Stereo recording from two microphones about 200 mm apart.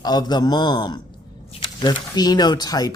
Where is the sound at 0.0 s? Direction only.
20° left (ahead or behind).